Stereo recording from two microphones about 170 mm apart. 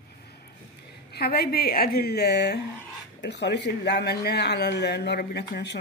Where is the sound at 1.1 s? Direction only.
65° left (ahead or behind).